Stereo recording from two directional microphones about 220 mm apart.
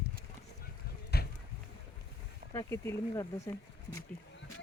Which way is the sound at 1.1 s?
45° left (ahead or behind).